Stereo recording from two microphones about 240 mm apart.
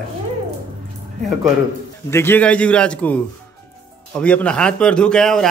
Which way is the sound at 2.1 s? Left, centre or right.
Centre.